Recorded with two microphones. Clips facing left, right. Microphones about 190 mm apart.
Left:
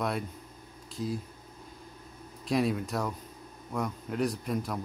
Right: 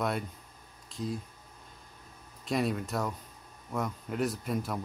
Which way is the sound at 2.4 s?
Centre (ahead or behind).